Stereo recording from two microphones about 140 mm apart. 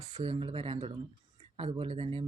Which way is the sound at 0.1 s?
35° right (ahead or behind).